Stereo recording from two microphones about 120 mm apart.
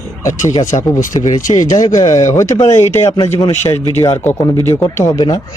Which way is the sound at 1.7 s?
90° left.